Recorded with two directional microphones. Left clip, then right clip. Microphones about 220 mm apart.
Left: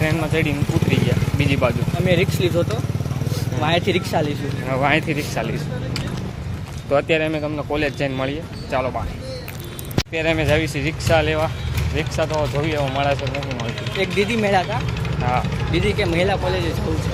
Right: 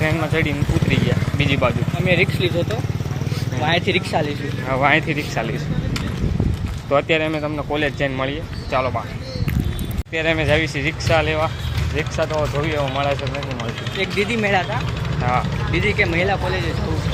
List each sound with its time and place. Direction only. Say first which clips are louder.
0.0 s speech: right 1 dB; centre (ahead or behind)
2.0 s speech: right 1 dB; 25° left (ahead or behind)
4.7 s speech: right 2 dB; centre (ahead or behind)
6.9 s speech: even; centre (ahead or behind)
10.2 s speech: right 1 dB; 10° left (ahead or behind)
15.2 s speech: right 1 dB; centre (ahead or behind)
15.7 s speech: right 2 dB; 20° left (ahead or behind)